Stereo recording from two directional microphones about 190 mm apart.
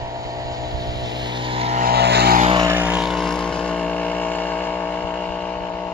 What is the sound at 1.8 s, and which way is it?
Vehicle, 55° right (ahead or behind).